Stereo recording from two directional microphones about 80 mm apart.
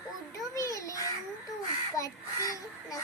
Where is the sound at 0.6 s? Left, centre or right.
Left.